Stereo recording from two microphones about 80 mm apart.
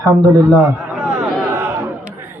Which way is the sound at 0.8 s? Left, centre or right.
Centre.